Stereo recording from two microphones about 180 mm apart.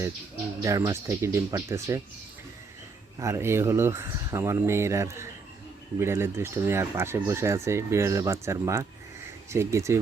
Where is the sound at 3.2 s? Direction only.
15° right (ahead or behind).